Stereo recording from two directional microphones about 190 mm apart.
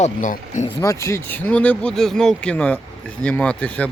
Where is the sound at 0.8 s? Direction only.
15° left (ahead or behind).